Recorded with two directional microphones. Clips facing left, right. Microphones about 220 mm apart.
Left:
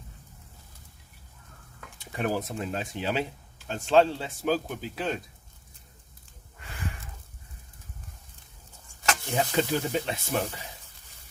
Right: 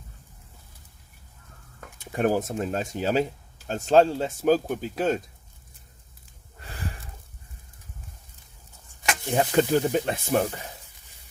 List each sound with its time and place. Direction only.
1.8 s speech: 45° right (ahead or behind)
6.6 s a sound: 35° right (ahead or behind)
9.3 s speech: 50° right (ahead or behind)